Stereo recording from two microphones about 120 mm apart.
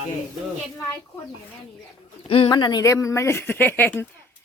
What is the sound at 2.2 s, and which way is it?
Speech, 50° left (ahead or behind).